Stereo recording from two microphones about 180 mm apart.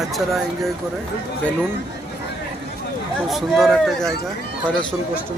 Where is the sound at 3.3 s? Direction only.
Centre (ahead or behind).